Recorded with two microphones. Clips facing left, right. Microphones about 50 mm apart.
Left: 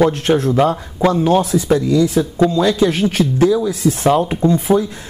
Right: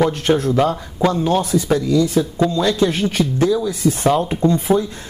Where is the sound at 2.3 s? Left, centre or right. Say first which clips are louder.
Left 3 dB; centre.